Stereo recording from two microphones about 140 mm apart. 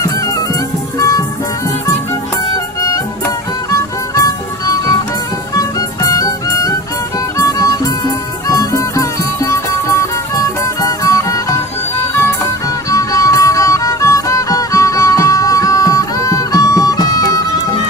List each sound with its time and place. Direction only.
0.9 s music: 25° left (ahead or behind)
3.2 s music: 20° left (ahead or behind)
12.9 s music: 25° left (ahead or behind)